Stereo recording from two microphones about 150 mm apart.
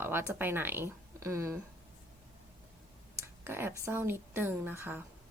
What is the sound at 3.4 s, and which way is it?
A woman's voice, 15° right (ahead or behind).